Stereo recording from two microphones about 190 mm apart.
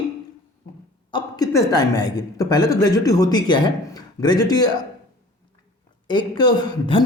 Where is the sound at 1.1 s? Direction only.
20° left (ahead or behind).